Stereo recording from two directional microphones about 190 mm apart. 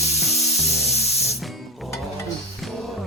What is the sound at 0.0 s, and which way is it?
Music, 35° left (ahead or behind).